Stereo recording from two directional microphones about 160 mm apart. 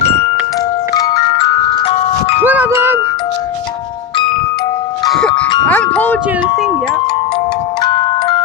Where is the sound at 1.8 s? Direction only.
35° left (ahead or behind).